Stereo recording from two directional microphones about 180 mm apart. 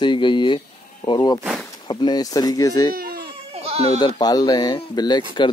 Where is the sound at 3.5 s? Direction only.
35° right (ahead or behind).